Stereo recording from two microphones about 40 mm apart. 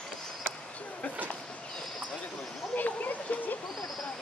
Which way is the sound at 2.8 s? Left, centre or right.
Left.